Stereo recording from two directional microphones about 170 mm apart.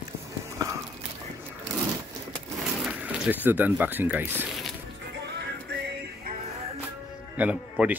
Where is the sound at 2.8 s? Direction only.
5° right (ahead or behind).